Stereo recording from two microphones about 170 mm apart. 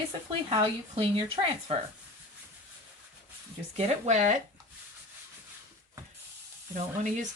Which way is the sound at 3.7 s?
45° right (ahead or behind).